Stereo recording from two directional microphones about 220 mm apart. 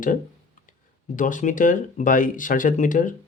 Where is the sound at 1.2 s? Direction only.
35° left (ahead or behind).